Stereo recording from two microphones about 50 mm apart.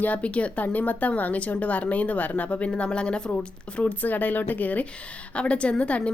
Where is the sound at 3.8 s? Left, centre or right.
Left.